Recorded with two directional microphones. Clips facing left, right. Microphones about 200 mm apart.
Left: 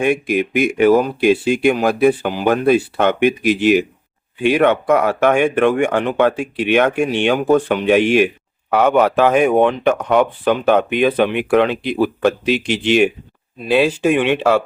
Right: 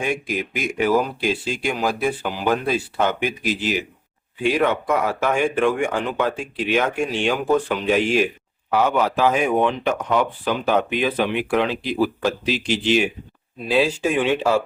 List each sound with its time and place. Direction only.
0.0 s speech: 60° left (ahead or behind)